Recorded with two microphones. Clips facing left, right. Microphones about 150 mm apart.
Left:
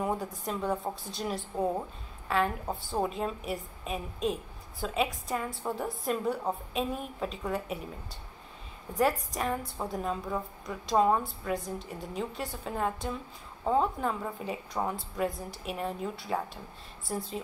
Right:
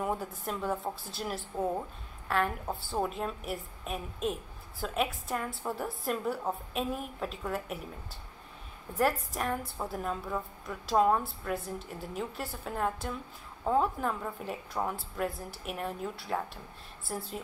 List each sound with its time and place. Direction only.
0.0 s a woman's voice: centre (ahead or behind)